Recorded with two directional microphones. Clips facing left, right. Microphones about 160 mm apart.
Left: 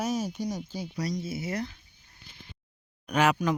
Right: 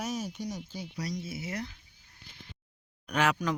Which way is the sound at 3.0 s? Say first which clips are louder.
Left 4 dB; 5° left (ahead or behind).